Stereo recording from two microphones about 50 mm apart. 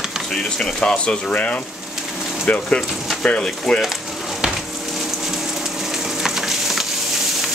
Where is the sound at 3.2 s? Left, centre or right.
Centre.